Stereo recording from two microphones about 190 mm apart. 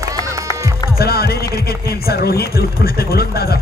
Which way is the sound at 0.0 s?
15° right (ahead or behind).